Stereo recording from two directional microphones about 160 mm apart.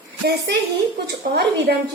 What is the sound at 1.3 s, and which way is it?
Speech, 90° right.